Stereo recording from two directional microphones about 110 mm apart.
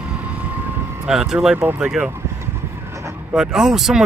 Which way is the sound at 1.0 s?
5° right (ahead or behind).